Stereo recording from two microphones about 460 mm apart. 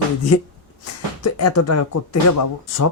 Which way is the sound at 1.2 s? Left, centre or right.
Left.